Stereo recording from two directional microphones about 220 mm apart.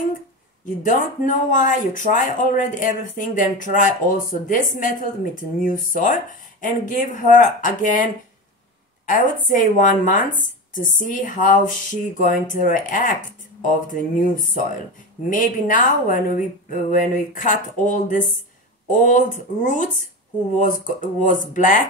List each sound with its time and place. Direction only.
0.8 s speech: 35° left (ahead or behind)
9.5 s speech: 35° left (ahead or behind)